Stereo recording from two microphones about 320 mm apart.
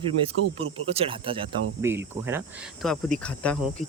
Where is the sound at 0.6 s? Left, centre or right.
Centre.